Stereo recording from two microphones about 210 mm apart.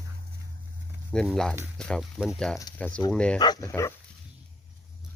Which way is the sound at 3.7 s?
15° left (ahead or behind).